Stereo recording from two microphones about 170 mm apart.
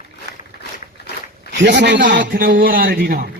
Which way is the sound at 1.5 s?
90° right.